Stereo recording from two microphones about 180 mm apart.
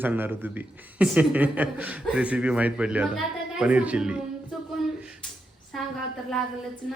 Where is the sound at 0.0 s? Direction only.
10° right (ahead or behind).